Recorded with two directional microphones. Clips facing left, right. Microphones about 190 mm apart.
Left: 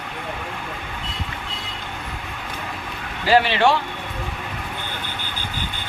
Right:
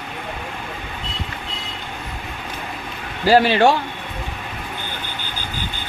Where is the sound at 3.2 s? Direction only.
40° right (ahead or behind).